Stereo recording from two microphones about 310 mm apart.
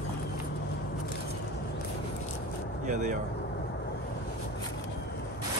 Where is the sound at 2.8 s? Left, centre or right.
Right.